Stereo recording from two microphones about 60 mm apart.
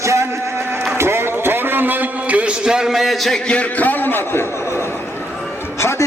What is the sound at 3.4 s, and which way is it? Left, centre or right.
A man's voice, left.